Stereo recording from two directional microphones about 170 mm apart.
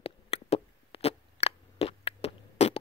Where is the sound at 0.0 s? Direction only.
35° left (ahead or behind).